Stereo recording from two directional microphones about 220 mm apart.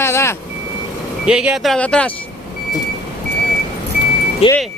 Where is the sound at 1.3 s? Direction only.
5° right (ahead or behind).